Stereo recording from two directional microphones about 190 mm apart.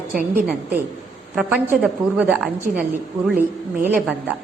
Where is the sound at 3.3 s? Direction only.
10° right (ahead or behind).